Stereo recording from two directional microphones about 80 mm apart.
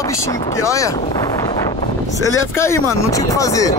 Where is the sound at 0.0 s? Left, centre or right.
Left.